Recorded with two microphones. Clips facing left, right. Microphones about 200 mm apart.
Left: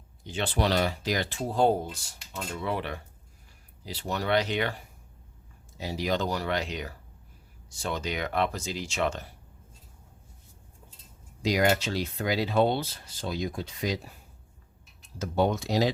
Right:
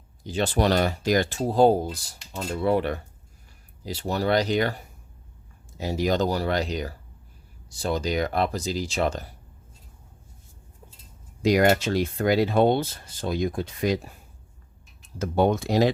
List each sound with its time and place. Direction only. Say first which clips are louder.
0.3 s speech: right 5 dB; 40° right (ahead or behind)
11.4 s speech: right 5 dB; 55° right (ahead or behind)
15.2 s speech: right 4 dB; 55° right (ahead or behind)